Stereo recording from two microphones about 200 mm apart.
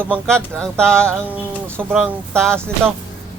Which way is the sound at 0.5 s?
5° left (ahead or behind).